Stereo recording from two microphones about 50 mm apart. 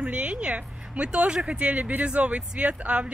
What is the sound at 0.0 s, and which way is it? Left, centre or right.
A woman's voice, right.